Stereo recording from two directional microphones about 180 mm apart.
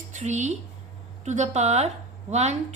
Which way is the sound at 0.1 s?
40° right (ahead or behind).